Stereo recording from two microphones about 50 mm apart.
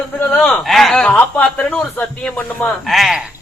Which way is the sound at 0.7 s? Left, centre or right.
Centre.